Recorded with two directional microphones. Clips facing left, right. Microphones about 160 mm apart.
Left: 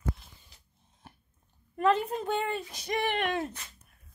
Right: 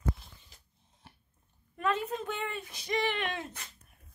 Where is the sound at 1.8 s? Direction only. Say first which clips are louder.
Left 5 dB; 35° left (ahead or behind); by 3.5 s 50° left (ahead or behind).